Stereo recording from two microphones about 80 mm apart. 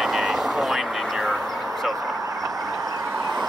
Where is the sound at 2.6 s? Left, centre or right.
Right.